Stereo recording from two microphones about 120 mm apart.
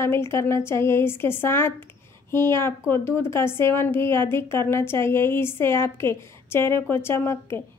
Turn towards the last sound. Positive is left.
turn(degrees=20)  # may be behind; listen again after turning